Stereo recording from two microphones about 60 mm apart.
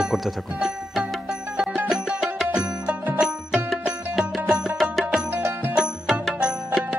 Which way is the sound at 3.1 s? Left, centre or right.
Centre.